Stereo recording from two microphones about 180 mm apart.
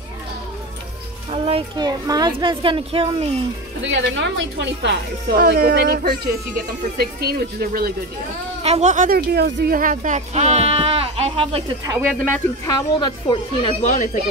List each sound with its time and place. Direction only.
1.3 s speech: 30° right (ahead or behind)
3.8 s a woman's voice: 85° right; by 7.9 s 55° right (ahead or behind)
8.6 s speech: 40° right (ahead or behind)
9.3 s speech: 65° right (ahead or behind); by 11.6 s 35° right (ahead or behind)
11.8 s speech: 20° right (ahead or behind)
12.6 s speech: 20° left (ahead or behind)